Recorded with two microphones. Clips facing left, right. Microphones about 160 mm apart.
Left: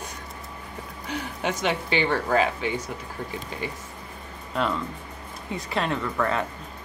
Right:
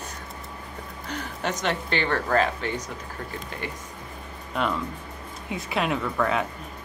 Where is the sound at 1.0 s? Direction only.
10° left (ahead or behind).